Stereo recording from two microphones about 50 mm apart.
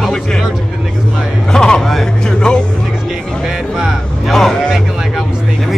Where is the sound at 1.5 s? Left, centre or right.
Centre.